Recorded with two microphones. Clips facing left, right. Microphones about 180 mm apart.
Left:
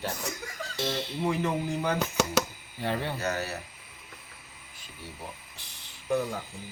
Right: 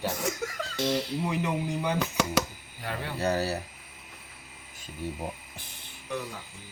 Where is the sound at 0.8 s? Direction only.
25° left (ahead or behind).